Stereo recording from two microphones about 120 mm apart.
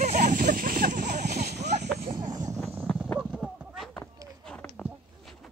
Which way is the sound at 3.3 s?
5° right (ahead or behind).